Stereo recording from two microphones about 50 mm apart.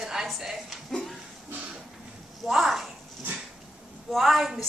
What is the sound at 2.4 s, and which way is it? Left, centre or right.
Speech, centre.